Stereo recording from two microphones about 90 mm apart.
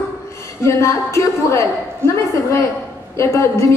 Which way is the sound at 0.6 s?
30° left (ahead or behind).